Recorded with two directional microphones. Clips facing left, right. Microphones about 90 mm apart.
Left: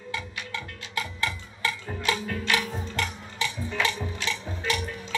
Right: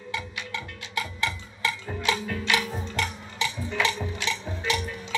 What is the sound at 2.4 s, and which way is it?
Music, 15° right (ahead or behind).